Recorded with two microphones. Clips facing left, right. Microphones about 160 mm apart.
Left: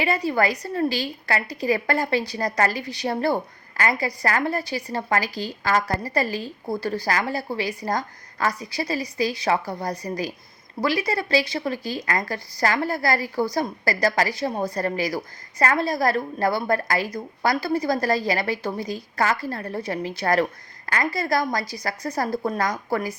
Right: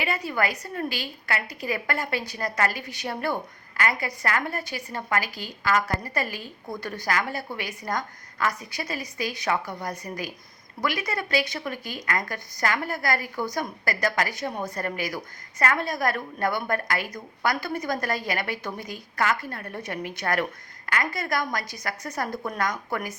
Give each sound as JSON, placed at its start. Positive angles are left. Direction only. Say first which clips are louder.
{"t": 0.0, "sound": "a woman's voice", "louder": "left 5 dB", "side_deg": 35}